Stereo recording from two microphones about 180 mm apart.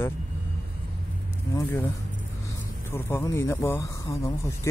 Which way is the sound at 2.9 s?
15° left (ahead or behind).